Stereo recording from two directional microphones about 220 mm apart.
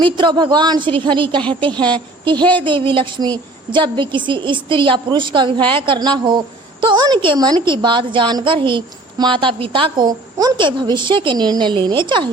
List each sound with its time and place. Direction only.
0.0 s a woman's voice: 20° right (ahead or behind)